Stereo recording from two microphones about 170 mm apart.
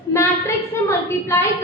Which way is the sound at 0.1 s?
15° left (ahead or behind).